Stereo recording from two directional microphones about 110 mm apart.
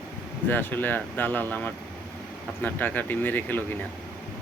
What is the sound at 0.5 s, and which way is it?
Speech, 15° left (ahead or behind).